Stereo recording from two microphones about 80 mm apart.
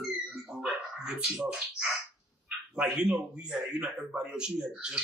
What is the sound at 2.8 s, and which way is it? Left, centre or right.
Speech, centre.